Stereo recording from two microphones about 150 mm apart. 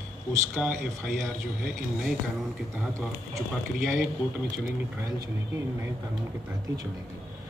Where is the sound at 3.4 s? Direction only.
Centre (ahead or behind).